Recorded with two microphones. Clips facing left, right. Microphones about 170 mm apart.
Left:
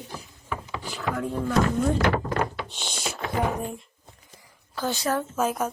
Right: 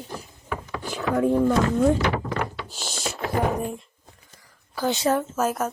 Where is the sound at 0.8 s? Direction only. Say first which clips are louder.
Right 8 dB; 50° right (ahead or behind).